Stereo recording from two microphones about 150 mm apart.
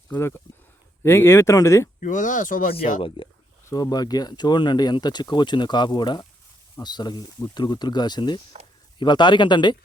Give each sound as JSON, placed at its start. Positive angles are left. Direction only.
{"t": 0.1, "sound": "speech", "side_deg": 15}
{"t": 2.0, "sound": "speech", "side_deg": 60}
{"t": 3.2, "sound": "speech", "side_deg": 35}